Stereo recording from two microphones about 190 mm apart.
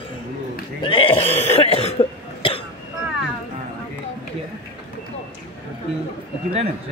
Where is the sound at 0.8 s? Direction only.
25° left (ahead or behind).